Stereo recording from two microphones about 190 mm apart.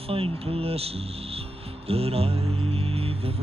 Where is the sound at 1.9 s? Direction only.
30° right (ahead or behind).